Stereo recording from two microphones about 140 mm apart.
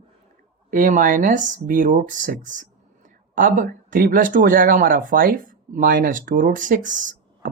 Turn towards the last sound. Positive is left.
turn(degrees=-65)  # may be behind; listen again after turning